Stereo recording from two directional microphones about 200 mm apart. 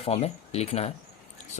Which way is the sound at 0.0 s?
30° left (ahead or behind).